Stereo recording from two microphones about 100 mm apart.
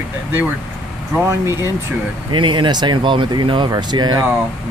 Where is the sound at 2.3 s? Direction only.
55° right (ahead or behind).